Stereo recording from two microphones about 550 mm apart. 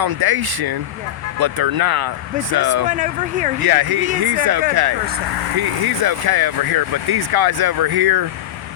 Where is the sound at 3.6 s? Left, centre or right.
Right.